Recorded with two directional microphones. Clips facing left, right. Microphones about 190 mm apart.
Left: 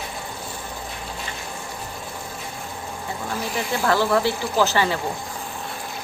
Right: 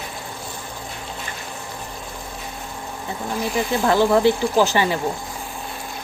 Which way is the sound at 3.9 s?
20° right (ahead or behind).